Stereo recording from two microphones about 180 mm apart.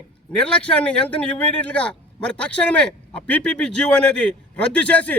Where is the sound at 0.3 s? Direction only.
5° left (ahead or behind).